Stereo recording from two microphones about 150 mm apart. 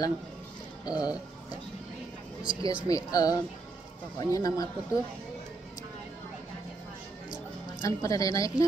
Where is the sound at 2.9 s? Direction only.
25° left (ahead or behind).